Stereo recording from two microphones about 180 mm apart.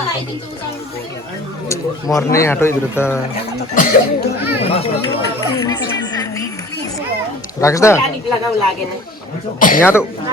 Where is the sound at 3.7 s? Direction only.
50° left (ahead or behind).